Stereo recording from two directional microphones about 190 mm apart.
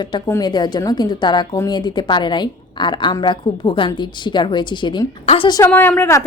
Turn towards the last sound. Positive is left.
turn(degrees=10)  # may be behind; listen again after turning